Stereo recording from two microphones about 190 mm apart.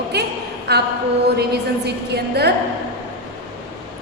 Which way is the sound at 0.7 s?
60° right (ahead or behind).